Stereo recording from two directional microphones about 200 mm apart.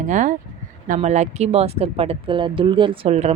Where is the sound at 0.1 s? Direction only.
40° right (ahead or behind).